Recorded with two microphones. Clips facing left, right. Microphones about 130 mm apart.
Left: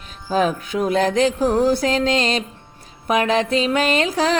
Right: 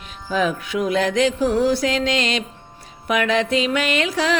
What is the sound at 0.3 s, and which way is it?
Music, 35° left (ahead or behind).